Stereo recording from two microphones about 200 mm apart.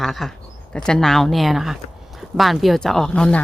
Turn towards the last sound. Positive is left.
turn(degrees=5)  # may be behind; listen again after turning